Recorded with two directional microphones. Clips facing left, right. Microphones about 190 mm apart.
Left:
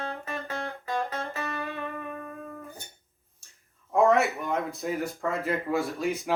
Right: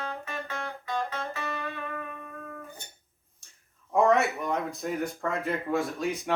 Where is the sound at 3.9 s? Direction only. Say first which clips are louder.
Left 1 dB; centre (ahead or behind).